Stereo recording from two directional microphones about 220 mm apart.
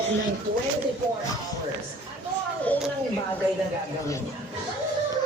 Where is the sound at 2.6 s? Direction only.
5° left (ahead or behind).